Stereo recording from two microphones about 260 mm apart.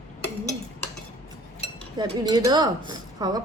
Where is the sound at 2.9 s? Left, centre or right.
Centre.